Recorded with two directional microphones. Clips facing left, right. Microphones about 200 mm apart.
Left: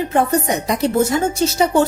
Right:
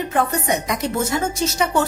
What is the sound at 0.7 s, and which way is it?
A woman's voice, 30° left (ahead or behind).